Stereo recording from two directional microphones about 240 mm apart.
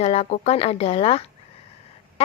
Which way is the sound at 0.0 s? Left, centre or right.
Left.